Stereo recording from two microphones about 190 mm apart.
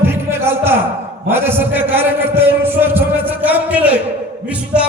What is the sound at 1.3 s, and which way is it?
A man's voice, 10° right (ahead or behind).